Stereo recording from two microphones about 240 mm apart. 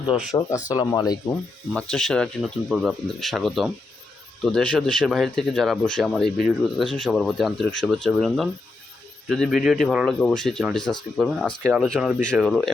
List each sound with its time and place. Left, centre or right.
0.1 s speech: centre
0.7 s speech: centre
1.7 s speech: centre